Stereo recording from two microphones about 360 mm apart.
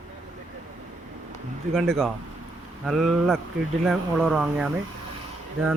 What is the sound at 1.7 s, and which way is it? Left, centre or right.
Speech, centre.